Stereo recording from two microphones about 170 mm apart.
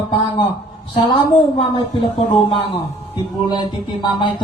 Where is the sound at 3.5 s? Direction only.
25° left (ahead or behind).